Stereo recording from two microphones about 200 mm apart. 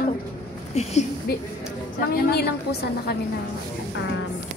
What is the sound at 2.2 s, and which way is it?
Speech, 50° left (ahead or behind).